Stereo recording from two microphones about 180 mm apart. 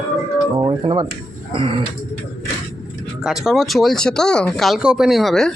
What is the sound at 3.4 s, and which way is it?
Speech, centre (ahead or behind).